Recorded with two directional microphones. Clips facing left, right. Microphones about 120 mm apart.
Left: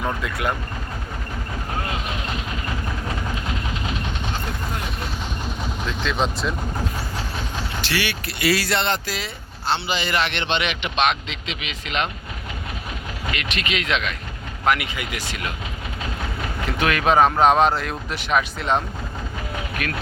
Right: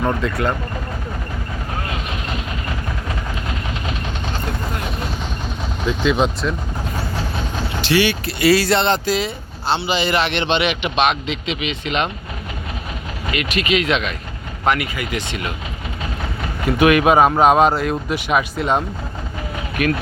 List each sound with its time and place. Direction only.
0.2 s speech: 10° left (ahead or behind)
5.8 s speech: 5° right (ahead or behind)
7.8 s speech: 20° right (ahead or behind); by 12.0 s centre (ahead or behind)
13.4 s speech: 5° right (ahead or behind)
14.8 s speech: 10° left (ahead or behind)
16.6 s speech: 10° right (ahead or behind)
19.8 s speech: 15° right (ahead or behind)